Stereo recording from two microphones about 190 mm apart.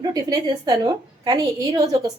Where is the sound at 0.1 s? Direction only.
20° right (ahead or behind).